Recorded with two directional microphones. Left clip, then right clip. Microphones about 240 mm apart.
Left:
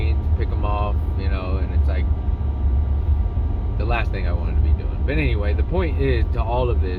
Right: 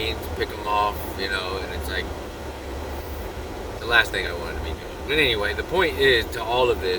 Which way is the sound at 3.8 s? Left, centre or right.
Centre.